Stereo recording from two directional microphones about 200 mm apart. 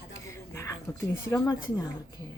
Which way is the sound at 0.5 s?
15° left (ahead or behind).